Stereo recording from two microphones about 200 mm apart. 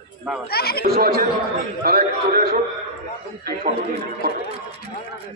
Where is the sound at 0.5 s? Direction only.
50° left (ahead or behind).